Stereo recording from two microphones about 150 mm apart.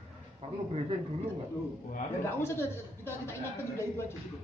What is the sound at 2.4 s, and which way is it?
A woman's voice, 15° left (ahead or behind).